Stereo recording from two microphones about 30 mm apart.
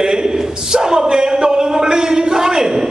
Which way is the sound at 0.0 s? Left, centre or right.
Right.